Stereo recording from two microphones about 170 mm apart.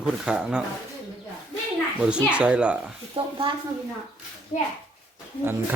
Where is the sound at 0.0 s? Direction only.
5° right (ahead or behind).